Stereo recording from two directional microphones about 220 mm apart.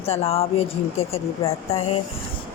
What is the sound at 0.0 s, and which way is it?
Speech, 30° left (ahead or behind).